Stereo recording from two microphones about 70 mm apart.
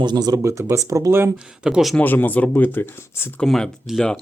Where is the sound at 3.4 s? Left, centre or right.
Centre.